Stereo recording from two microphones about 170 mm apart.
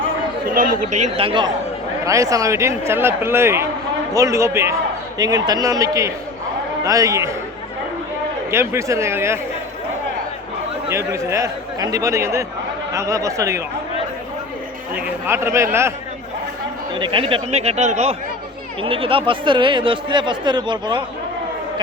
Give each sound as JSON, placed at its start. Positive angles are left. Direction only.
{"t": 0.5, "sound": "speech", "side_deg": -55}
{"t": 8.4, "sound": "speech", "side_deg": -15}
{"t": 10.8, "sound": "speech", "side_deg": -15}
{"t": 14.9, "sound": "speech", "side_deg": -10}
{"t": 17.0, "sound": "speech", "side_deg": -30}